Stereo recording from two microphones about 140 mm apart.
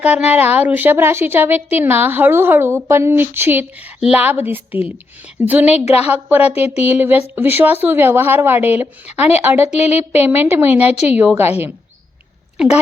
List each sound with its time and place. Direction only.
0.0 s a woman's voice: 10° right (ahead or behind)
5.8 s a woman's voice: 50° left (ahead or behind)
6.2 s a woman's voice: 10° right (ahead or behind)